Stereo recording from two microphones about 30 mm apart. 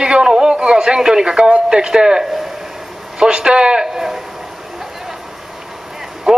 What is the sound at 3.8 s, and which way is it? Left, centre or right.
Speech, centre.